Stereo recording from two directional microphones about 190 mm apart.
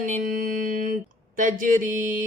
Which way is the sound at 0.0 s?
40° right (ahead or behind).